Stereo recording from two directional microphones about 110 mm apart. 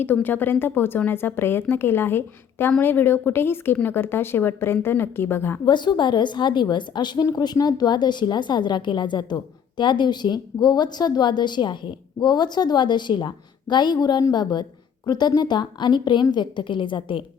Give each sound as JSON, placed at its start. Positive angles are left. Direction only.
{"t": 0.0, "sound": "a woman's voice", "side_deg": 15}
{"t": 5.6, "sound": "a woman's voice", "side_deg": 40}